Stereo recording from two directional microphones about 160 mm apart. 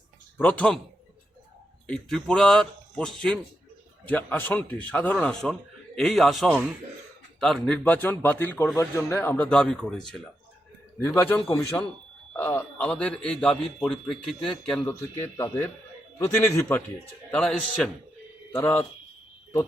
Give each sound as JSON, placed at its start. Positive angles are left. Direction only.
{"t": 0.4, "sound": "speech", "side_deg": 10}
{"t": 1.9, "sound": "a man's voice", "side_deg": 5}
{"t": 7.9, "sound": "speech", "side_deg": 10}
{"t": 11.0, "sound": "speech", "side_deg": 15}